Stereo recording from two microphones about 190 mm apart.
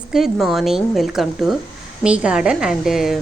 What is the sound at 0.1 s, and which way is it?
A woman's voice, centre (ahead or behind).